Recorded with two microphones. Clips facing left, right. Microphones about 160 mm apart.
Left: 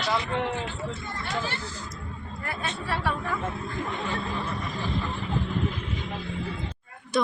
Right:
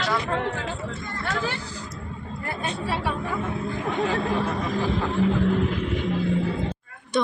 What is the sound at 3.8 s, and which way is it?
Speech, 90° right.